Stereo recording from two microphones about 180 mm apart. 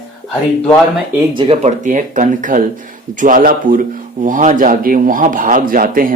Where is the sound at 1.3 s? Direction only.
25° right (ahead or behind).